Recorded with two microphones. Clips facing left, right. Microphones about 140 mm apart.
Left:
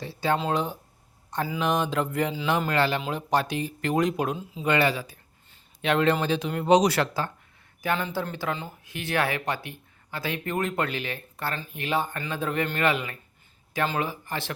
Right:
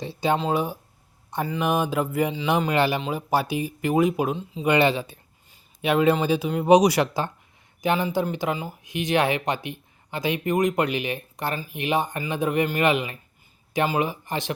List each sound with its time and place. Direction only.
0.0 s speech: 20° right (ahead or behind)
0.3 s speech: 5° right (ahead or behind)
2.6 s speech: 15° right (ahead or behind)
4.6 s speech: 20° right (ahead or behind)
5.5 s speech: 10° right (ahead or behind)